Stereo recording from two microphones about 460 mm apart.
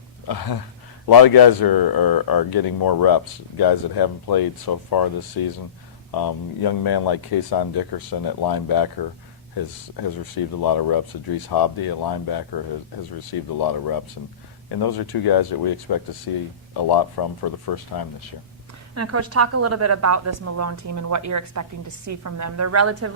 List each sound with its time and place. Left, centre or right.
0.3 s speech: left
6.1 s speech: left
10.6 s speech: left
18.9 s a woman's voice: right